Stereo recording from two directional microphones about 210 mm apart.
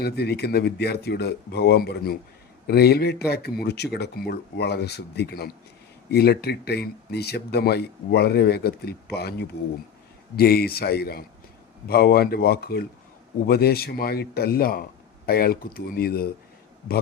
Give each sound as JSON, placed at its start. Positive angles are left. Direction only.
{"t": 0.0, "sound": "speech", "side_deg": 50}